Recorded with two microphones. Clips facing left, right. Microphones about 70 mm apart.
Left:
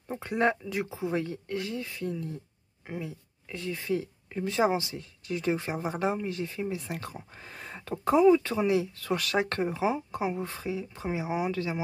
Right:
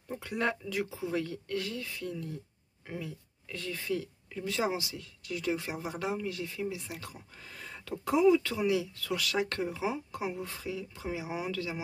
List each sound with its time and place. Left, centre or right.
0.1 s speech: left